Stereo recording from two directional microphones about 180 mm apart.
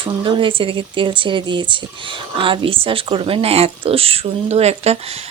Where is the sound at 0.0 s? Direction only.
30° right (ahead or behind).